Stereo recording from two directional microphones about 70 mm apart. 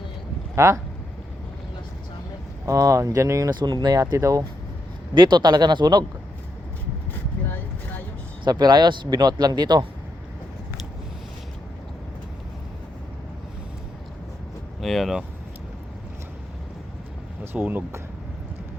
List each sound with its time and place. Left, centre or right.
0.5 s speech: right
2.6 s speech: right
3.6 s speech: right
4.2 s speech: right
5.1 s speech: right
7.4 s vehicle: left
8.4 s speech: right
14.8 s speech: centre
17.4 s speech: right